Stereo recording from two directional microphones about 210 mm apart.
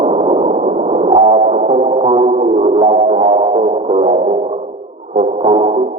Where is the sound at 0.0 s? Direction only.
30° right (ahead or behind).